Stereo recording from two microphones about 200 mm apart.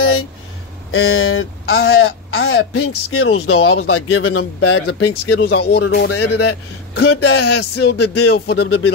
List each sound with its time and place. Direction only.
0.0 s a sound: 90° left
0.9 s speech: 90° left
5.4 s speech: 55° left (ahead or behind)
8.6 s speech: 90° left